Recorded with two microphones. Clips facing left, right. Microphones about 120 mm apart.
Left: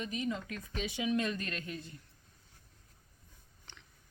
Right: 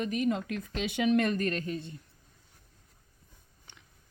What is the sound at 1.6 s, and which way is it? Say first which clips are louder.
Speech: right 7 dB; 30° right (ahead or behind).